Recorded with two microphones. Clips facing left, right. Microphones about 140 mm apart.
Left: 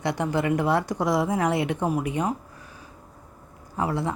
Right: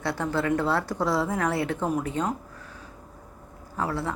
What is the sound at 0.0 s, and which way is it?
Speech, 15° left (ahead or behind).